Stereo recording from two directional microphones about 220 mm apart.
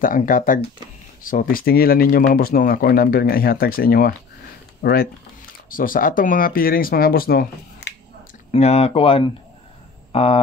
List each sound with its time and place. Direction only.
0.0 s speech: 40° left (ahead or behind)
8.5 s speech: 30° left (ahead or behind)